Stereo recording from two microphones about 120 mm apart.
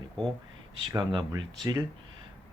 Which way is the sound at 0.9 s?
35° right (ahead or behind).